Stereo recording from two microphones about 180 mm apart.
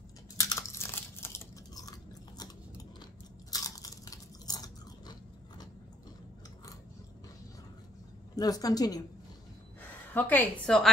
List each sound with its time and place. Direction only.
0.4 s crunch: 15° left (ahead or behind)
3.4 s biting: 20° left (ahead or behind)
8.4 s a woman's voice: 20° left (ahead or behind)
9.8 s a woman's voice: 10° left (ahead or behind)